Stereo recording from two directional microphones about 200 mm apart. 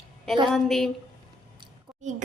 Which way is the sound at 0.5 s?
Centre (ahead or behind).